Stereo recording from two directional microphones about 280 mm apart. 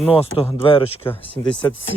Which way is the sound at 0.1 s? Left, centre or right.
Centre.